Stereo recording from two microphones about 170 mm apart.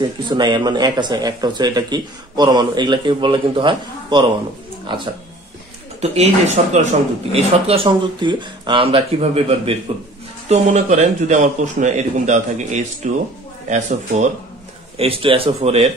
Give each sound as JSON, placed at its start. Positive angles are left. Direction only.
{"t": 0.3, "sound": "speech", "side_deg": -25}
{"t": 5.9, "sound": "a man's voice", "side_deg": -40}
{"t": 15.0, "sound": "speech", "side_deg": -35}